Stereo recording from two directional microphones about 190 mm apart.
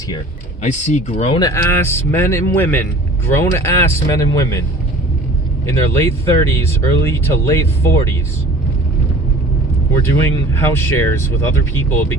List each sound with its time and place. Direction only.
0.6 s speech: 40° left (ahead or behind)
1.4 s speech: 15° left (ahead or behind)
5.6 s speech: 15° left (ahead or behind)
9.9 s speech: 15° left (ahead or behind)